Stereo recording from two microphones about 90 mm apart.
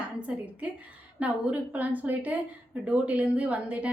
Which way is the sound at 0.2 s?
15° right (ahead or behind).